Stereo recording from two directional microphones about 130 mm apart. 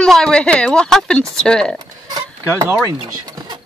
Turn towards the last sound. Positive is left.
turn(degrees=-30)  # may be behind; listen again after turning